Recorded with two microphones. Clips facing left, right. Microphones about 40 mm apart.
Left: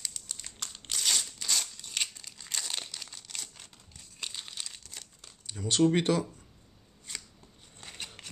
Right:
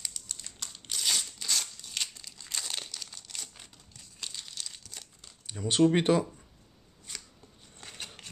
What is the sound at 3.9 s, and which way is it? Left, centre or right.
Crumpling, centre.